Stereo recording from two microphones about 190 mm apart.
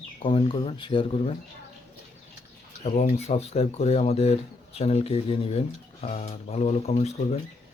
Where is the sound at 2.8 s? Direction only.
35° left (ahead or behind).